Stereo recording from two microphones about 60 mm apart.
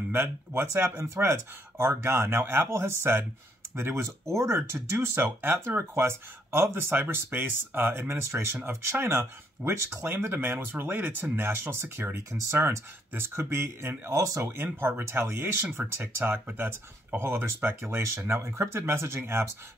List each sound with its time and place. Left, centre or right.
0.1 s speech: right
11.3 s speech: right
12.4 s speech: right
13.1 s speech: right
14.6 s speech: right